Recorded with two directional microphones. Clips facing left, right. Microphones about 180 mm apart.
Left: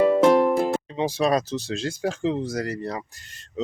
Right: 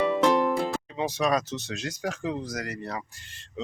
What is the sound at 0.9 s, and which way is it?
Speech, 30° left (ahead or behind).